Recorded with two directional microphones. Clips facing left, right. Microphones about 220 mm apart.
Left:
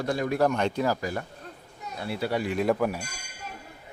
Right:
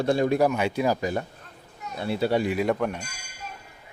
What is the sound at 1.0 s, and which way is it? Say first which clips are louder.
Speech: right 4 dB; 20° right (ahead or behind).